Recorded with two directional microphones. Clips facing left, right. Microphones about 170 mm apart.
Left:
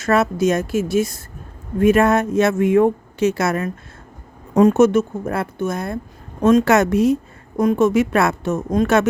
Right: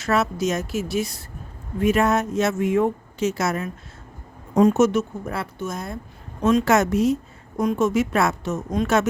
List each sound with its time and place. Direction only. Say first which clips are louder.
0.0 s a woman's voice: left 5 dB; 50° left (ahead or behind)
6.4 s a woman's voice: left 5 dB; 45° left (ahead or behind)
6.7 s speech: left 4 dB; 60° left (ahead or behind)